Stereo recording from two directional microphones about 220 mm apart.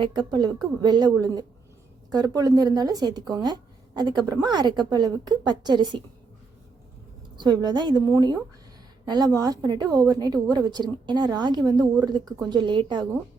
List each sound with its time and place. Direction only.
0.0 s a woman's voice: 20° right (ahead or behind)
2.1 s speech: 15° right (ahead or behind)
7.3 s a woman's voice: 20° right (ahead or behind)